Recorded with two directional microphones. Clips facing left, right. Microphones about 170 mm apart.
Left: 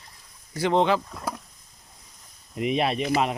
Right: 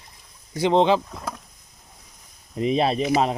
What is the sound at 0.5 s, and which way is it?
Speech, 20° right (ahead or behind).